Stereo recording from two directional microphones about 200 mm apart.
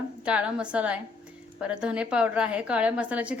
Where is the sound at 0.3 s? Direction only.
5° right (ahead or behind).